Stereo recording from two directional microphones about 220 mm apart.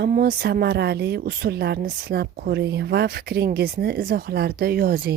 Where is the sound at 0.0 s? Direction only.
45° right (ahead or behind).